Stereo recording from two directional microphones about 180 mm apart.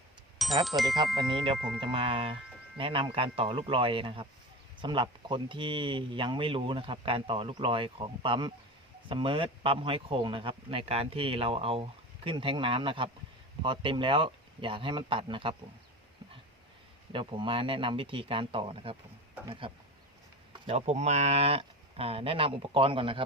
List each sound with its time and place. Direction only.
0.3 s speech: centre (ahead or behind)
1.2 s speech: 25° right (ahead or behind)
1.5 s speech: 5° right (ahead or behind)
1.8 s speech: 30° right (ahead or behind)
17.1 s speech: 25° right (ahead or behind)